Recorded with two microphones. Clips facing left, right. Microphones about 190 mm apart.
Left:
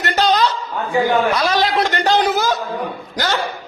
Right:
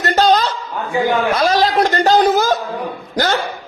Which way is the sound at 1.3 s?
45° right (ahead or behind).